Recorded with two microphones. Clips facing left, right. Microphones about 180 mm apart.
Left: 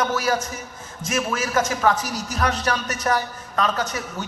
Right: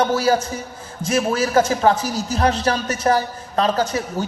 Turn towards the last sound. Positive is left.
turn(degrees=-30)  # may be behind; listen again after turning